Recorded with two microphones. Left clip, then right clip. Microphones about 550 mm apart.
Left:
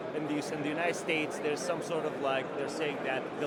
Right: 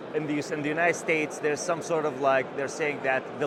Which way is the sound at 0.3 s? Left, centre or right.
Right.